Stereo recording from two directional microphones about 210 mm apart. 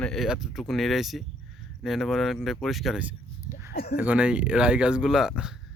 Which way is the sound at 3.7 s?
45° left (ahead or behind).